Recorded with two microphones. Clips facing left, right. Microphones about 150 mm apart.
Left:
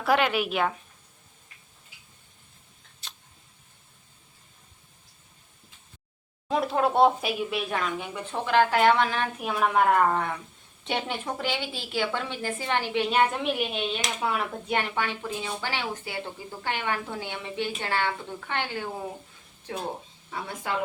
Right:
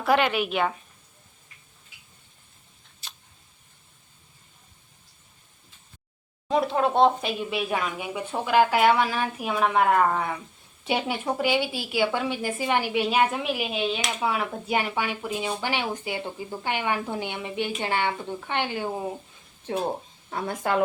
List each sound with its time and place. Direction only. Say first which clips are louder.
0.0 s speech: right 1 dB; centre (ahead or behind)
3.0 s a sound: right 1 dB; 5° right (ahead or behind)
6.5 s a woman's voice: right 2 dB; centre (ahead or behind); by 19.0 s 20° right (ahead or behind)
20.3 s a woman's voice: right 6 dB; 50° right (ahead or behind)